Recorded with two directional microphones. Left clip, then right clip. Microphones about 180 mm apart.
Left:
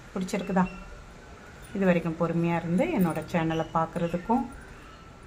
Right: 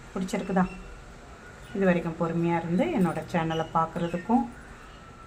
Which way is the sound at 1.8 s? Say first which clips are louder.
Even; 10° left (ahead or behind).